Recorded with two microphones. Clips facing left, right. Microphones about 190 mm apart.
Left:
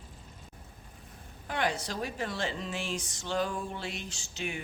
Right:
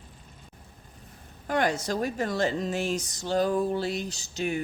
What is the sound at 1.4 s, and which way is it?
A man's voice, 45° right (ahead or behind).